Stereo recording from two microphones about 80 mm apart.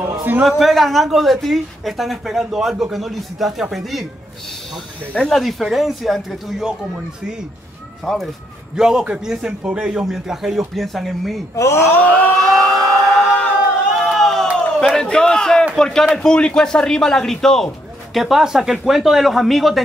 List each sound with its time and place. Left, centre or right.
0.4 s speech: centre
5.1 s speech: centre
8.0 s a man's voice: centre
11.5 s speech: left
12.4 s a sound: centre
13.9 s crowd: centre
15.7 s speech: centre